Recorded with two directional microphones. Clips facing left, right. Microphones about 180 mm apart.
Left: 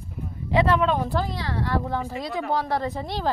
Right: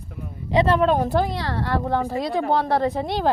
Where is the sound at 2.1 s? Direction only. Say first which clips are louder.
Right 6 dB; 30° right (ahead or behind).